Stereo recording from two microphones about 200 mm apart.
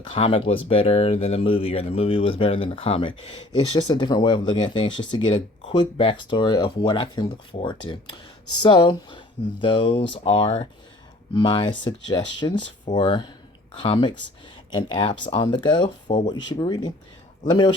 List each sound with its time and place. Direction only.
0.1 s speech: 30° left (ahead or behind)